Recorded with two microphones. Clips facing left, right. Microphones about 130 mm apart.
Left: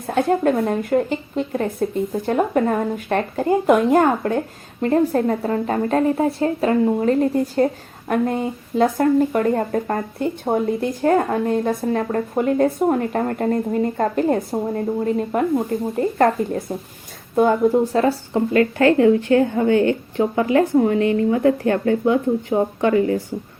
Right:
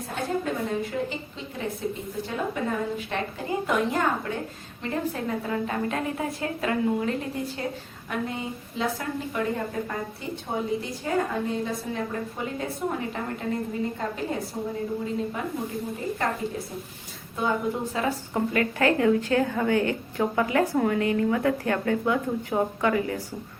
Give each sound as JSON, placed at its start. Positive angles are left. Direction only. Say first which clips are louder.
{"t": 0.1, "sound": "a woman's voice", "louder": "left 11 dB", "side_deg": 60}
{"t": 17.9, "sound": "speech", "louder": "left 8 dB", "side_deg": 45}
{"t": 18.5, "sound": "a woman's voice", "louder": "left 9 dB", "side_deg": 30}